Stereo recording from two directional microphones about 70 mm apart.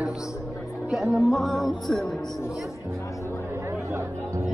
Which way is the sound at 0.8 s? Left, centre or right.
Centre.